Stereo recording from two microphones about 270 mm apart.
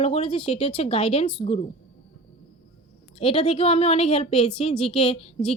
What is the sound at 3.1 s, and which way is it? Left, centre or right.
Speech, left.